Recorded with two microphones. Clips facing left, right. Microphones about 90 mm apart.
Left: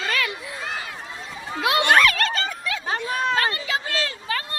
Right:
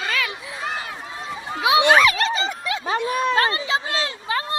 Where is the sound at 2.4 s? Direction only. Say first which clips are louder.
Right 3 dB; 20° right (ahead or behind).